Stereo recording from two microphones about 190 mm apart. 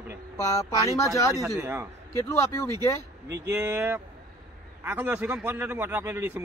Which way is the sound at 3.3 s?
15° right (ahead or behind).